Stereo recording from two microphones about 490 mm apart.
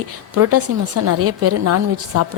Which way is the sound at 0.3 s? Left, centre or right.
Right.